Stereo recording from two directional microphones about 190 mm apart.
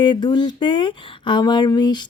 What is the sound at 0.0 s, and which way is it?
Speech, 25° left (ahead or behind).